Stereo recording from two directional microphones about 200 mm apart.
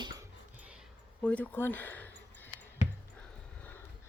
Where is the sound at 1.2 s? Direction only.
5° left (ahead or behind).